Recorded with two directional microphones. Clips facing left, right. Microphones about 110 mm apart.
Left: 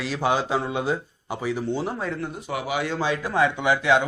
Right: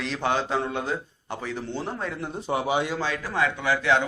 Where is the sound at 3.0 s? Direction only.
15° left (ahead or behind).